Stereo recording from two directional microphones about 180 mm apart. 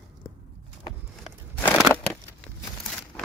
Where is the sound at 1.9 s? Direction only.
20° right (ahead or behind).